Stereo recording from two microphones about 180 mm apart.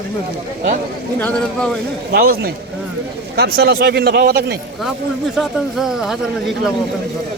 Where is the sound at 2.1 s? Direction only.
60° right (ahead or behind).